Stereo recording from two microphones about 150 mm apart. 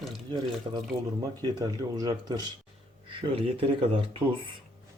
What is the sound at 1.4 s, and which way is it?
Speech, 25° right (ahead or behind).